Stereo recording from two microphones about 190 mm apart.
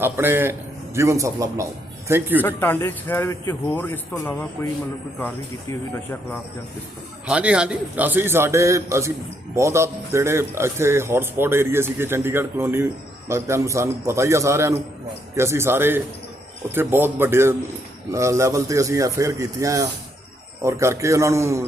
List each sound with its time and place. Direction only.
0.0 s a man's voice: 10° right (ahead or behind)
2.4 s a man's voice: 10° left (ahead or behind)
7.3 s a man's voice: 5° right (ahead or behind)